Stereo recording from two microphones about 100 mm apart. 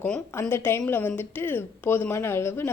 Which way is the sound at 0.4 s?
20° left (ahead or behind).